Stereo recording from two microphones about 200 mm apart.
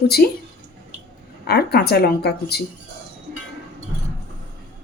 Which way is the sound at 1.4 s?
55° left (ahead or behind).